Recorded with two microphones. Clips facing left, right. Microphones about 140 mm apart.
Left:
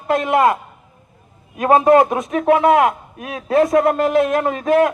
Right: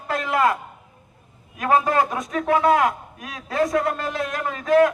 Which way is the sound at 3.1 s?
55° left (ahead or behind).